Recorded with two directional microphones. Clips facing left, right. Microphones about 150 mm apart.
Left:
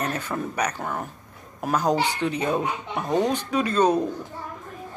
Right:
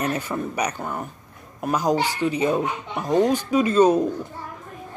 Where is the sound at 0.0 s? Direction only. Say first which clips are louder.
Right 2 dB; 10° right (ahead or behind).